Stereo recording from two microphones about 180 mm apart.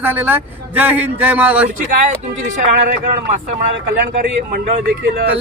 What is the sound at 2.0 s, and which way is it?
Speech, 45° right (ahead or behind).